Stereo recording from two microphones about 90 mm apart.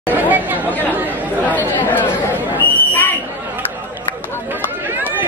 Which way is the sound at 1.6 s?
20° left (ahead or behind).